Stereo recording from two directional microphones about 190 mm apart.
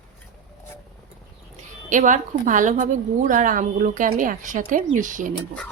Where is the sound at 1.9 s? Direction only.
40° right (ahead or behind).